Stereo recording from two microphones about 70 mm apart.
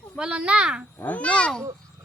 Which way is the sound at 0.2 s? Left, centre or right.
Centre.